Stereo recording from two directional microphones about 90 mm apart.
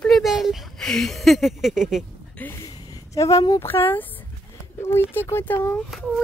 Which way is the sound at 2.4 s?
20° left (ahead or behind).